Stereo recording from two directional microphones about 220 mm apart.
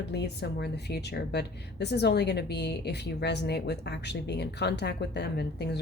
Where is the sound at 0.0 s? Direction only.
50° left (ahead or behind).